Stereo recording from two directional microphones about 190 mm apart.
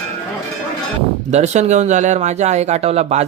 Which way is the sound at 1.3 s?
35° right (ahead or behind).